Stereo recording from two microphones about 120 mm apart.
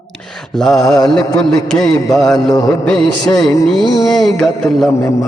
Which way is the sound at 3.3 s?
30° left (ahead or behind).